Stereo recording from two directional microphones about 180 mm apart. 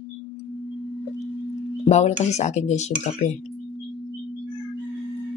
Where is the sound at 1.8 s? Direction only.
40° left (ahead or behind).